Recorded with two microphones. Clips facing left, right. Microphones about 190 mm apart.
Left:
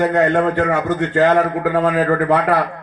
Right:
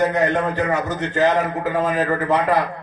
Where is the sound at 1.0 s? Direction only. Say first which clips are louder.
Left 4 dB; 65° left (ahead or behind).